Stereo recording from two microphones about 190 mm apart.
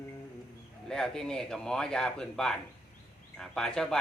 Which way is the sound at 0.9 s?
5° left (ahead or behind).